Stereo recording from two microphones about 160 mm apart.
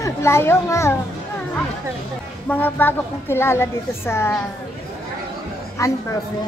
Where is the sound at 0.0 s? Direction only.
15° left (ahead or behind).